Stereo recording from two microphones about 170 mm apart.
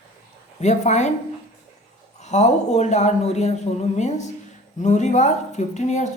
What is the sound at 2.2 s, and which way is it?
A woman's voice, 40° left (ahead or behind).